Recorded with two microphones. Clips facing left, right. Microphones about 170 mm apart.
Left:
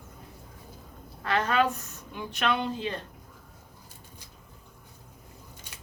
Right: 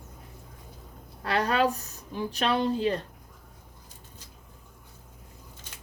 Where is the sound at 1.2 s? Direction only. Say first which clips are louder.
Right 1 dB; 35° right (ahead or behind).